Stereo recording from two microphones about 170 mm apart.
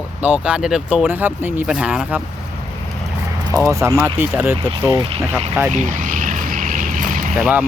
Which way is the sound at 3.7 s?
15° right (ahead or behind).